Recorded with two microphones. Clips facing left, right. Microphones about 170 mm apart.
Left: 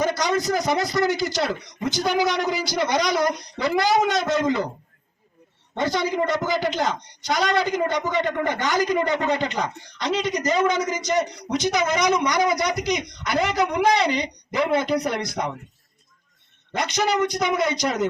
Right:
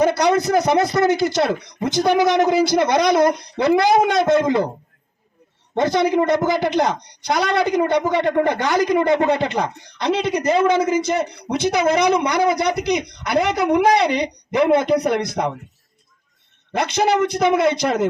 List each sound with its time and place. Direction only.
0.0 s a woman's voice: 60° right (ahead or behind)
6.1 s a woman's voice: 65° right (ahead or behind)
17.3 s a woman's voice: 60° right (ahead or behind)